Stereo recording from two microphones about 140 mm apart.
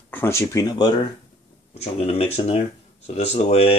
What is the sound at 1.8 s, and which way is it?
Speech, 45° left (ahead or behind).